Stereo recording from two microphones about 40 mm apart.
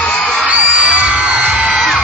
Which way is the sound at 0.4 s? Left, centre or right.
Right.